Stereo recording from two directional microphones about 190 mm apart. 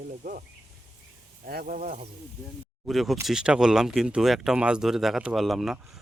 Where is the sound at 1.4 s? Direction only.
50° right (ahead or behind).